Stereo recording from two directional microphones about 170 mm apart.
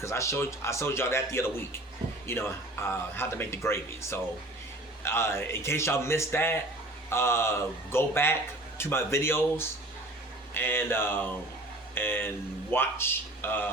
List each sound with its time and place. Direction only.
0.0 s a man's voice: 15° left (ahead or behind)